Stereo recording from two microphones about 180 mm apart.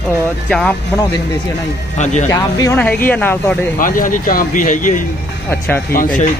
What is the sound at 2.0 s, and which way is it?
Speech, 40° left (ahead or behind).